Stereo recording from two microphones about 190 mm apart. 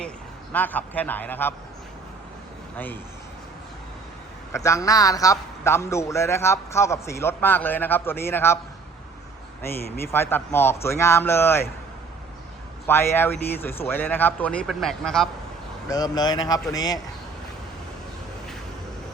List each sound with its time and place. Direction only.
0.5 s a man's voice: 10° left (ahead or behind)
2.7 s a man's voice: 10° left (ahead or behind)
4.5 s a man's voice: 15° left (ahead or behind)
9.6 s a man's voice: 10° left (ahead or behind)
12.9 s a man's voice: 10° left (ahead or behind)
15.9 s speech: 20° left (ahead or behind)